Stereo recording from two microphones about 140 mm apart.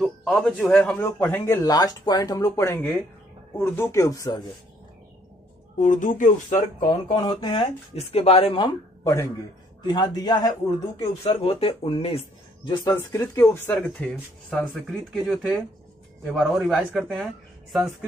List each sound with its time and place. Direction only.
0.0 s speech: centre (ahead or behind)
1.2 s speech: 15° left (ahead or behind)
5.8 s speech: 65° left (ahead or behind)
6.9 s speech: 35° left (ahead or behind)
8.1 s speech: 45° left (ahead or behind)
9.0 s speech: 20° left (ahead or behind)
9.8 s speech: 30° left (ahead or behind)
11.0 s speech: 40° left (ahead or behind)
12.6 s speech: 30° left (ahead or behind)
13.0 s speech: 20° left (ahead or behind)
13.7 s speech: 5° left (ahead or behind)